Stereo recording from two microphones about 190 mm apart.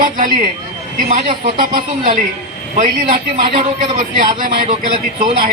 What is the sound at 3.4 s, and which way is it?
Speech, 25° right (ahead or behind).